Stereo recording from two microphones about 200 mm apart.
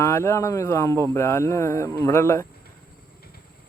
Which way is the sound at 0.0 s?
15° left (ahead or behind).